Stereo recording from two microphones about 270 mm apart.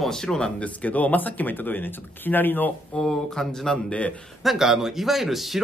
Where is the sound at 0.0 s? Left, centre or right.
Centre.